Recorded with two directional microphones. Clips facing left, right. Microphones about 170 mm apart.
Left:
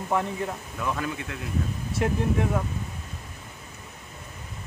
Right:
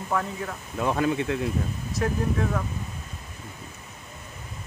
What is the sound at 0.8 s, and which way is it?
Speech, 30° right (ahead or behind).